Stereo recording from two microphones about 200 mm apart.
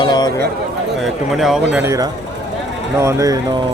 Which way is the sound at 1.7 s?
15° right (ahead or behind).